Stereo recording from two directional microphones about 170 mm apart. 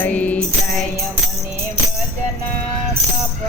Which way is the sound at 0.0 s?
10° left (ahead or behind).